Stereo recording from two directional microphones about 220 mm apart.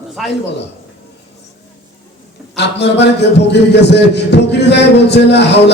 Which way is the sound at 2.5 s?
50° left (ahead or behind).